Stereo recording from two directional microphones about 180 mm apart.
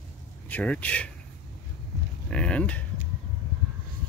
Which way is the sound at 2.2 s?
5° left (ahead or behind).